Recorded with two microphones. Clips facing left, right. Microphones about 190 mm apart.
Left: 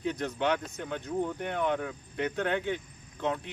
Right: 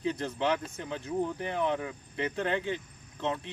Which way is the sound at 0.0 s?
Centre (ahead or behind).